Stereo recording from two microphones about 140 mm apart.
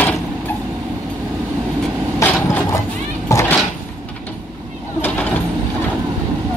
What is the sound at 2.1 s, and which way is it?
Vehicle, 20° left (ahead or behind).